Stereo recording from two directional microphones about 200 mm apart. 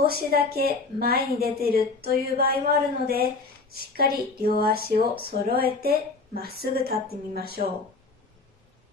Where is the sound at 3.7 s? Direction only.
50° right (ahead or behind).